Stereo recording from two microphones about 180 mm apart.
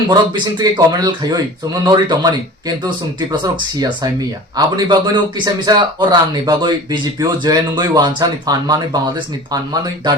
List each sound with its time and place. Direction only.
0.6 s speech: 20° right (ahead or behind)